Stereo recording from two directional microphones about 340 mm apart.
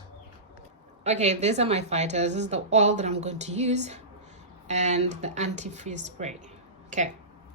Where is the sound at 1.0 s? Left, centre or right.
Centre.